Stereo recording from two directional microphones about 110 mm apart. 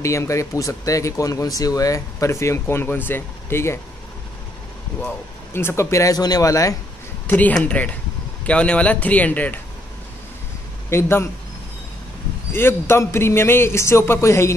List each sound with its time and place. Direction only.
0.0 s speech: 25° left (ahead or behind)
5.0 s speech: 20° left (ahead or behind)
7.2 s speech: 15° left (ahead or behind)
10.9 s speech: 20° left (ahead or behind)
12.5 s speech: 20° left (ahead or behind)